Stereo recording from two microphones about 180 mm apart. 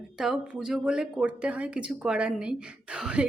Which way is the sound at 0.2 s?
Centre (ahead or behind).